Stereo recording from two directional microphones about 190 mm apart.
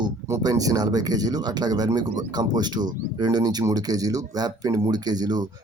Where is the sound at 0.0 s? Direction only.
20° right (ahead or behind).